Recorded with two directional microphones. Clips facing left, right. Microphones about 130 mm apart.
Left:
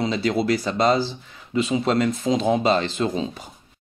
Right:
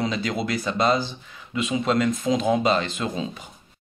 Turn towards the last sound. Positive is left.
turn(degrees=30)  # may be behind; listen again after turning